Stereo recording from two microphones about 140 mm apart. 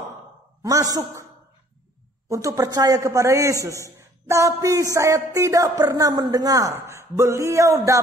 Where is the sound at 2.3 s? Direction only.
25° right (ahead or behind).